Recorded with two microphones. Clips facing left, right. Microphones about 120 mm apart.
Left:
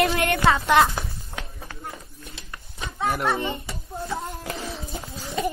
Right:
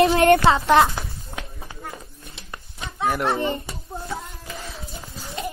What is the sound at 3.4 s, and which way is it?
Speech, 35° right (ahead or behind).